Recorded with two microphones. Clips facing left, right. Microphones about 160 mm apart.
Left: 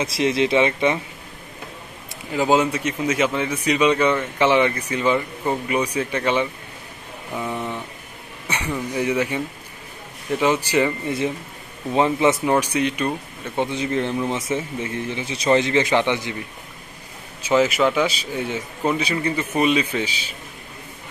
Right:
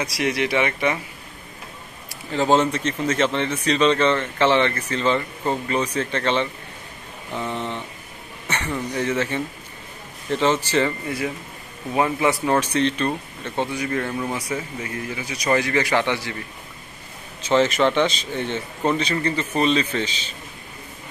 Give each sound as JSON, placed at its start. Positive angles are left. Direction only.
{"t": 0.0, "sound": "a man's voice", "side_deg": 25}
{"t": 2.3, "sound": "speech", "side_deg": 10}
{"t": 7.3, "sound": "vehicle", "side_deg": 10}
{"t": 8.5, "sound": "speech", "side_deg": 10}
{"t": 11.1, "sound": "a man's voice", "side_deg": 25}
{"t": 13.7, "sound": "a man's voice", "side_deg": 20}
{"t": 17.4, "sound": "speech", "side_deg": 10}